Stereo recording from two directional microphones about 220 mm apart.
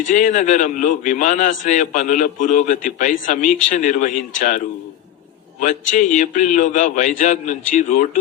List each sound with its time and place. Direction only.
0.1 s a man's voice: 35° left (ahead or behind)